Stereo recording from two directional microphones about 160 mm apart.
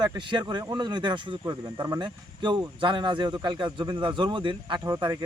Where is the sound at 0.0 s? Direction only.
25° right (ahead or behind).